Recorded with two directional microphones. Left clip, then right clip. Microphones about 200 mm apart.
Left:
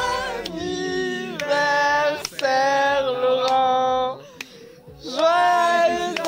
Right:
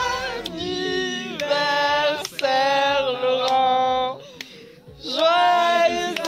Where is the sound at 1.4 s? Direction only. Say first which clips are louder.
Left 1 dB; 5° left (ahead or behind).